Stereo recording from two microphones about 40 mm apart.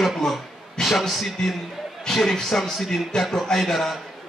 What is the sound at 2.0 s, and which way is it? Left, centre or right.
A man's voice, centre.